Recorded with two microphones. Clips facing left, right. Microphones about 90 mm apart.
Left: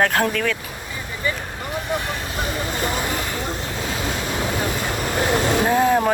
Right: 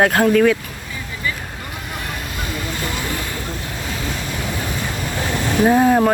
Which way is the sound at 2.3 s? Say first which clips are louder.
Left 2 dB; 25° left (ahead or behind).